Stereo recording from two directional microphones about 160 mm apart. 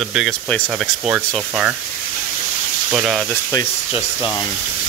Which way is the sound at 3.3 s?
15° left (ahead or behind).